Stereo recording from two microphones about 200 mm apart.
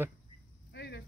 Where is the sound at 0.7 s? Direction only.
55° left (ahead or behind).